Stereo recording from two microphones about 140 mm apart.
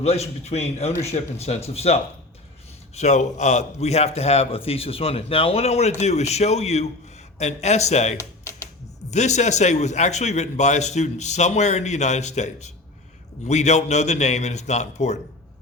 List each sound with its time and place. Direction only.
0.0 s a man's voice: 50° left (ahead or behind)